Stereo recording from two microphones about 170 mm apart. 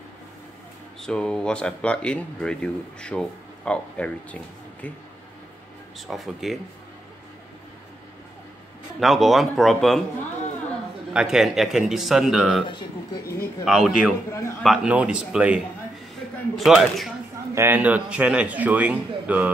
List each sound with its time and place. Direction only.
1.0 s speech: 5° left (ahead or behind)
5.9 s speech: centre (ahead or behind)
9.0 s speech: centre (ahead or behind)
11.1 s speech: 5° right (ahead or behind)
12.6 s speech: 25° left (ahead or behind)
13.7 s speech: 5° right (ahead or behind)
17.6 s a man's voice: 10° right (ahead or behind)